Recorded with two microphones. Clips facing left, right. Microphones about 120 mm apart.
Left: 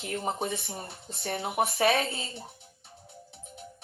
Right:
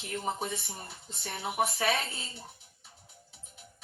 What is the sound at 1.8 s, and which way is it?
Speech, 55° left (ahead or behind).